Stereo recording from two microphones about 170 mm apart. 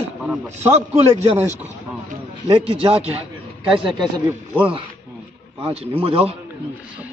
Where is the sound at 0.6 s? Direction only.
40° right (ahead or behind).